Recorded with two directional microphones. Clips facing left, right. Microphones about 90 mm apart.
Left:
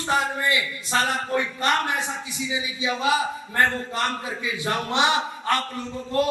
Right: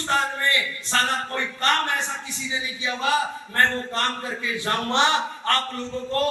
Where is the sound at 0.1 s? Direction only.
10° left (ahead or behind).